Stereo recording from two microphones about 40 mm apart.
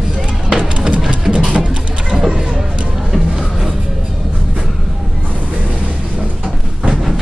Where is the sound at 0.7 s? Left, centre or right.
Right.